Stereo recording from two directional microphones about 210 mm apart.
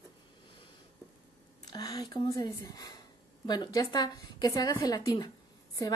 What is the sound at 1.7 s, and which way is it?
A woman's voice, 20° left (ahead or behind).